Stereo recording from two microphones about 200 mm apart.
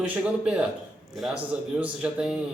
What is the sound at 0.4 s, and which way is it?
Speech, centre (ahead or behind).